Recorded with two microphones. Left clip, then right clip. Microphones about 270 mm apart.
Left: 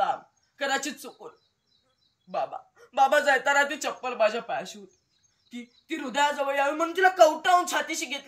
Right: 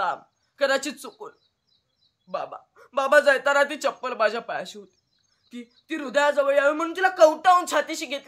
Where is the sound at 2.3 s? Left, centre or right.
Centre.